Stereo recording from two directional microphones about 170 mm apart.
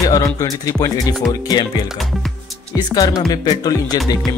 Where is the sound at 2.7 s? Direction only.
20° left (ahead or behind).